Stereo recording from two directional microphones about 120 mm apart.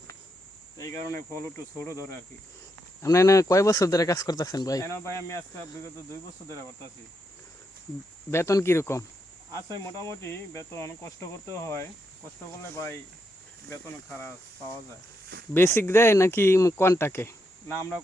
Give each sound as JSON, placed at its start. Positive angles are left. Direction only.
{"t": 0.8, "sound": "speech", "side_deg": 25}
{"t": 8.3, "sound": "speech", "side_deg": 25}
{"t": 15.5, "sound": "speech", "side_deg": 20}